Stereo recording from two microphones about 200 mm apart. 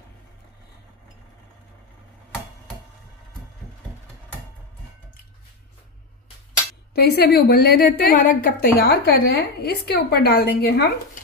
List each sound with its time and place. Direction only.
7.0 s a woman's voice: 55° left (ahead or behind)